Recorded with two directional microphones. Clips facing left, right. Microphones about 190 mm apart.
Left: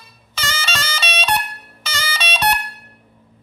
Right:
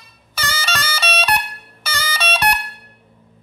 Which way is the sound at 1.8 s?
15° right (ahead or behind).